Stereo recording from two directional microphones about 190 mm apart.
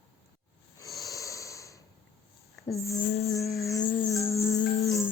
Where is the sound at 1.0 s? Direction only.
15° left (ahead or behind).